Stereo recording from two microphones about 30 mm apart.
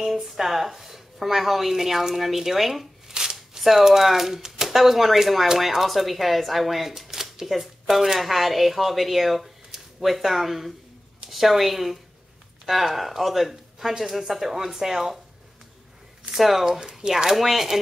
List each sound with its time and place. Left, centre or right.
0.0 s a woman's voice: centre
3.1 s shuffling cards: centre
4.6 s speech: centre
7.1 s shuffling cards: centre
7.9 s a woman's voice: centre
16.3 s speech: centre
17.0 s speech: right
17.4 s a woman's voice: centre